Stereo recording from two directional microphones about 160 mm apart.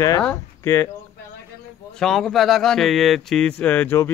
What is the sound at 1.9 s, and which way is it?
Speech, centre (ahead or behind).